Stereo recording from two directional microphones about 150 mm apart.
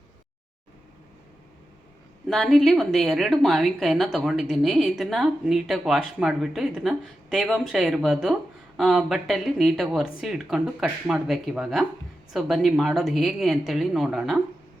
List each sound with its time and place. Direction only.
2.2 s a woman's voice: centre (ahead or behind)